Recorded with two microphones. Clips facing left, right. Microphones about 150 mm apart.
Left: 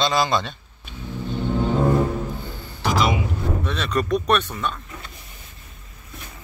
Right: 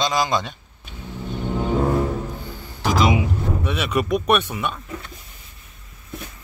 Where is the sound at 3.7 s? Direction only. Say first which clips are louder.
Right 1 dB; 10° right (ahead or behind).